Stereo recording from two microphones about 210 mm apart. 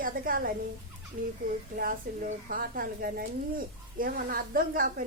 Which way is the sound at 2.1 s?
45° right (ahead or behind).